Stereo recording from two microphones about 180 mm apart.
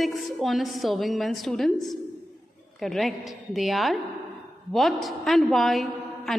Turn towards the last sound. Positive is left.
turn(degrees=0)  # may be behind; listen again after turning